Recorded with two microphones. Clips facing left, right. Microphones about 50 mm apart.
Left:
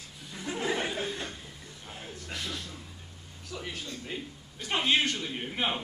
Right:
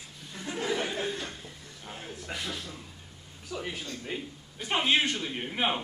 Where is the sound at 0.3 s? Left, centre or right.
Centre.